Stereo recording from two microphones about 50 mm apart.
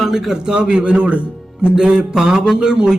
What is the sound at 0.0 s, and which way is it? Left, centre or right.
A man's voice, centre.